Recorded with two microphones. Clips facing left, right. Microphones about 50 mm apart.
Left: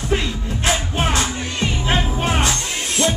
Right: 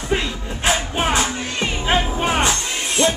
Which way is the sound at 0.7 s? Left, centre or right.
Centre.